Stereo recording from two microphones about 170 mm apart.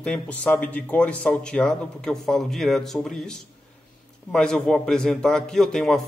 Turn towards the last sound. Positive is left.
turn(degrees=5)  # may be behind; listen again after turning